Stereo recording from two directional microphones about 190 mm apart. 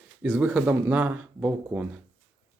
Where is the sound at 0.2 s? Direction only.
10° right (ahead or behind).